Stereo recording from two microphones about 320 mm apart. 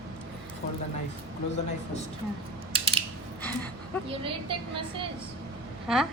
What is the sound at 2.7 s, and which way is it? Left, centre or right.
Mechanisms, centre.